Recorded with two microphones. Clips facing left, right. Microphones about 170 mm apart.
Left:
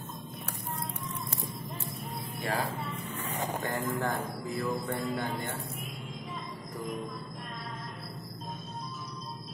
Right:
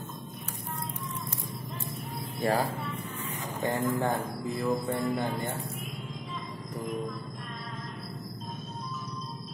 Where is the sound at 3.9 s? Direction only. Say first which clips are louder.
Right 3 dB; 25° right (ahead or behind).